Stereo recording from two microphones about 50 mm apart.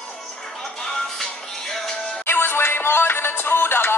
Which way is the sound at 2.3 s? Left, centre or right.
Left.